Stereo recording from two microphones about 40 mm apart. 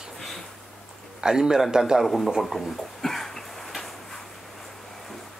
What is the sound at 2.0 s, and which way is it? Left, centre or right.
Speech, centre.